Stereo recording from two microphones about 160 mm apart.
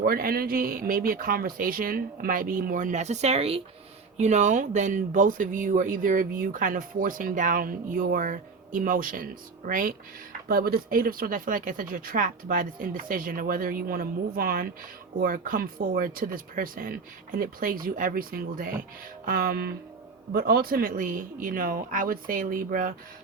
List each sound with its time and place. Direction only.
0.0 s speech: 65° right (ahead or behind)
19.2 s music: 65° right (ahead or behind)
20.3 s speech: 70° right (ahead or behind)